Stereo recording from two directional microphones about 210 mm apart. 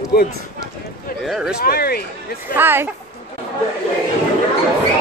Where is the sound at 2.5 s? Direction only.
10° right (ahead or behind).